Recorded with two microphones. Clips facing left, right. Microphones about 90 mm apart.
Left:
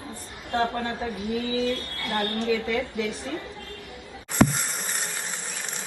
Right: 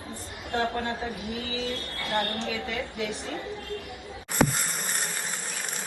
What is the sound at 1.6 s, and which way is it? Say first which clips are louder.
A woman's voice: left 5 dB; 20° right (ahead or behind).